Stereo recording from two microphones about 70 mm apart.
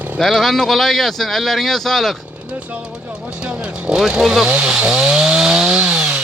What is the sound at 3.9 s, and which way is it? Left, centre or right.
Speech, centre.